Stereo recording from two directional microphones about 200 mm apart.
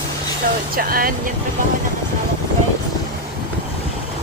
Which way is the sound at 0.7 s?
45° right (ahead or behind).